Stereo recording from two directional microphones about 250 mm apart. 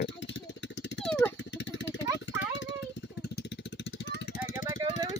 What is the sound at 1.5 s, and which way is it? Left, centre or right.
Vehicle, left.